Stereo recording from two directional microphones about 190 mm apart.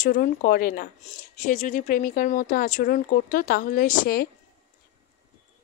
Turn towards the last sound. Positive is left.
turn(degrees=50)  # may be behind; listen again after turning